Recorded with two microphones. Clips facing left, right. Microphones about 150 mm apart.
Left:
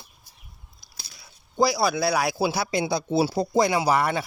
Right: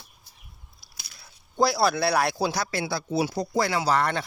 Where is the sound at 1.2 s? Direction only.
Centre (ahead or behind); by 3.0 s 15° left (ahead or behind).